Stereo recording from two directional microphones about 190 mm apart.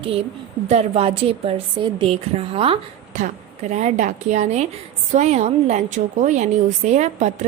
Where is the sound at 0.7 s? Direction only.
35° right (ahead or behind).